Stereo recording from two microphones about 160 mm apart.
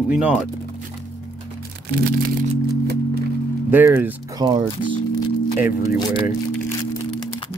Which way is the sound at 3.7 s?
15° right (ahead or behind).